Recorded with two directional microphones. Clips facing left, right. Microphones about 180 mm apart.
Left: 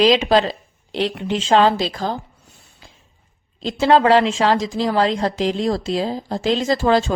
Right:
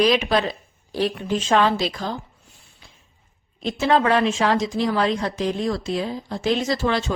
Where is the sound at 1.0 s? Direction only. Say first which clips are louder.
Left 1 dB; 75° left (ahead or behind); by 1.6 s 90° left.